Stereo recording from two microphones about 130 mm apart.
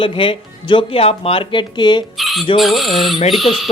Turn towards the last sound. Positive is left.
turn(degrees=0)  # may be behind; listen again after turning